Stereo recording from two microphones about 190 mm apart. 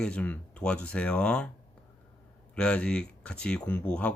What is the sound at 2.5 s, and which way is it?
Speech, 5° left (ahead or behind).